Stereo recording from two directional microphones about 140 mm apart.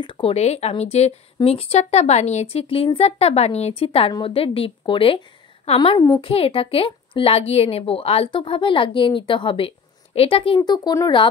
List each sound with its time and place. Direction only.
0.0 s speech: 40° left (ahead or behind)
6.2 s speech: 40° left (ahead or behind)